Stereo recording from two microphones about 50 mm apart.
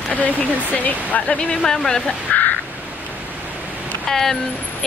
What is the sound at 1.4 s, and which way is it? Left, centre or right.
Speech, centre.